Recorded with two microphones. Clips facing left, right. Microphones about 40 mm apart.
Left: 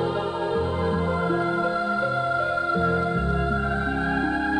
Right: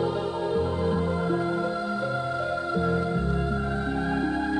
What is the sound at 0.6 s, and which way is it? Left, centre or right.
Music, left.